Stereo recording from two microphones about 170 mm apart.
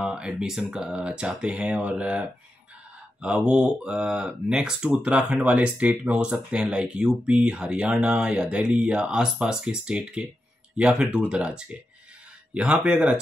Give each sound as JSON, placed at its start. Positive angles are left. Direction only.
{"t": 0.0, "sound": "speech", "side_deg": -5}